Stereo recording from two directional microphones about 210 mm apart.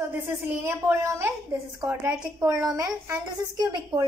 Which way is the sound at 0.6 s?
10° right (ahead or behind).